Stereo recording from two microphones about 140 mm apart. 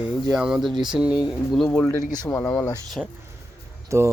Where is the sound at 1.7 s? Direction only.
15° left (ahead or behind).